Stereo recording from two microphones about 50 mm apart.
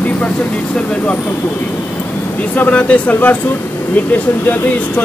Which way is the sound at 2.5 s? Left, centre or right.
Left.